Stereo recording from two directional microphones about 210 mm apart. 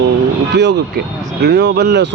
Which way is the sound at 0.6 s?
55° right (ahead or behind).